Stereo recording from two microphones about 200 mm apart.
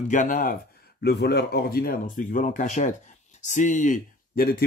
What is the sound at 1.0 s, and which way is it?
Speech, 55° left (ahead or behind).